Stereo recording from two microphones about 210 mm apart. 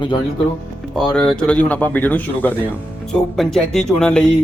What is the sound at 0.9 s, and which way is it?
Speech, centre (ahead or behind).